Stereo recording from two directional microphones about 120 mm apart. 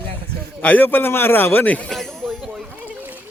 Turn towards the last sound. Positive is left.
turn(degrees=-15)  # may be behind; listen again after turning